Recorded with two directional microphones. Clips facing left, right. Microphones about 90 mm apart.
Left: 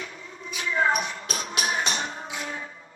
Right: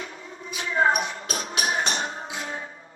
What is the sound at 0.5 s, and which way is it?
Music, 35° right (ahead or behind).